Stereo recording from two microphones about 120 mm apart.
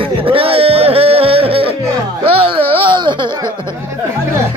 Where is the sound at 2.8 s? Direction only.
45° right (ahead or behind).